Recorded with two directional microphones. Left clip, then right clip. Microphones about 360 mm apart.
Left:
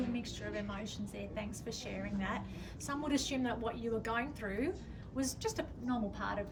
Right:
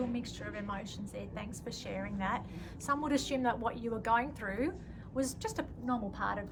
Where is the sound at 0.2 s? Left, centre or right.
Centre.